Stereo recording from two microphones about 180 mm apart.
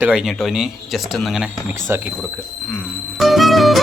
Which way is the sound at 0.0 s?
5° right (ahead or behind).